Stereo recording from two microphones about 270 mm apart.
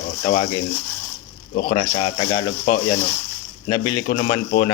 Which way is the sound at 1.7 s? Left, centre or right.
Left.